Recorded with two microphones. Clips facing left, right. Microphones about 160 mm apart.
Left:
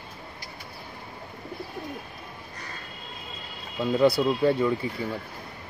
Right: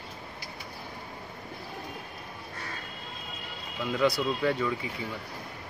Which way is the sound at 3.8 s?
35° left (ahead or behind).